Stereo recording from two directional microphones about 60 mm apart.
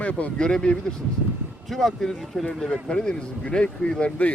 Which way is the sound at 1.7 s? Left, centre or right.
Centre.